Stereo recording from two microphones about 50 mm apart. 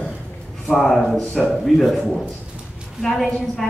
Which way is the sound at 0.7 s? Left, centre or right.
Centre.